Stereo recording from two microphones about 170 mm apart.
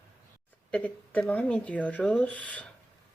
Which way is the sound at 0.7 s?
10° left (ahead or behind).